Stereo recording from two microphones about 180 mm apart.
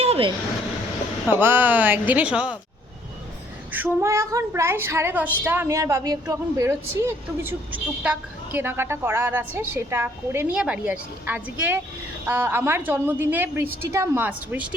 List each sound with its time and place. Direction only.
0.0 s a sound: 30° right (ahead or behind)
1.3 s a woman's voice: 10° right (ahead or behind)
3.7 s a woman's voice: 15° right (ahead or behind)